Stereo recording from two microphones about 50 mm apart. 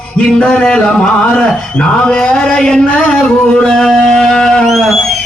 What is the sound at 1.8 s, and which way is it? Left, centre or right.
Speech, centre.